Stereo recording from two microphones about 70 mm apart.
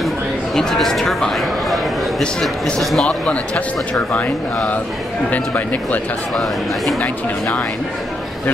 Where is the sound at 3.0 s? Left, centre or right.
Centre.